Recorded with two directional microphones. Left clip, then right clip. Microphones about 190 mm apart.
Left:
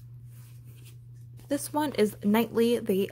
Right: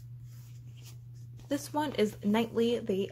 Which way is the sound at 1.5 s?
20° left (ahead or behind).